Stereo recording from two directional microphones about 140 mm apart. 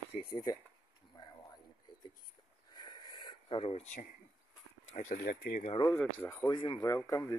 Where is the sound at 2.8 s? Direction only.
30° left (ahead or behind).